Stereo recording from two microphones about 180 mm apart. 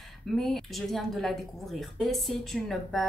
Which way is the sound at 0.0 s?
Centre (ahead or behind).